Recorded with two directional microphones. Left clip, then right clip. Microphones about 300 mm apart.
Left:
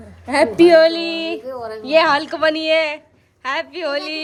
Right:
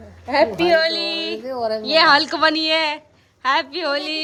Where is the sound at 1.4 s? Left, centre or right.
Right.